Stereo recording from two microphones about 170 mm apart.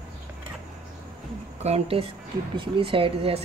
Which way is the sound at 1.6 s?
35° right (ahead or behind).